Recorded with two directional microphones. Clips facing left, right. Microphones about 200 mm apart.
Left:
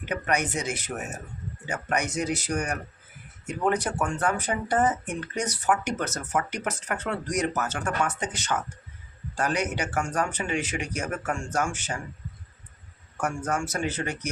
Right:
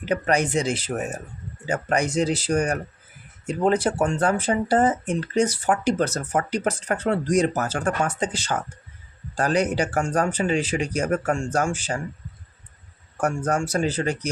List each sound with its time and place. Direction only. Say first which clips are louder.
0.0 s speech: right 5 dB; 30° right (ahead or behind)
13.1 s speech: right 5 dB; 35° right (ahead or behind)